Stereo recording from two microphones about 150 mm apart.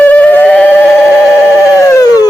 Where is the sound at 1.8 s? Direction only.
25° left (ahead or behind).